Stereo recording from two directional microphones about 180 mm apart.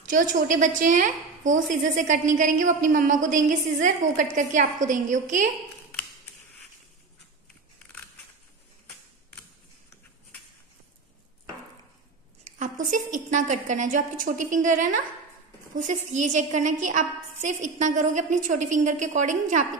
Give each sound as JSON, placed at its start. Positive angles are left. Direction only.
{"t": 0.0, "sound": "a woman's voice", "side_deg": -45}
{"t": 12.5, "sound": "a woman's voice", "side_deg": -45}